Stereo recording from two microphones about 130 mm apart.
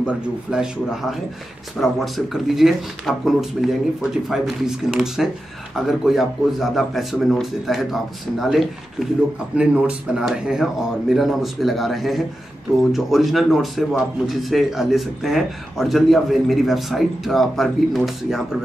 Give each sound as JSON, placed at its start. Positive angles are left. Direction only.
{"t": 0.0, "sound": "a man's voice", "side_deg": -5}